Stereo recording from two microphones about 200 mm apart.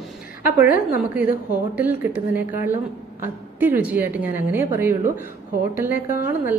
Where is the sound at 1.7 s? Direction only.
10° right (ahead or behind).